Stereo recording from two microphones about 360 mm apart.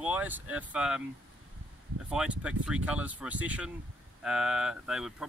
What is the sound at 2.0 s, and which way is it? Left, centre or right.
Speech, centre.